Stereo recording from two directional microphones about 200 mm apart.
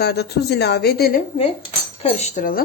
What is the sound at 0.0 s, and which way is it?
Speech, 55° left (ahead or behind).